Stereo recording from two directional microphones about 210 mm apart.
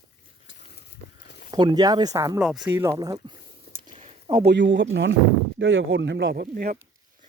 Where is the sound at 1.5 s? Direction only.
20° right (ahead or behind).